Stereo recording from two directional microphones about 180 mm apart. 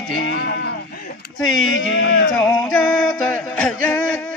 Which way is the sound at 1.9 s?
90° left.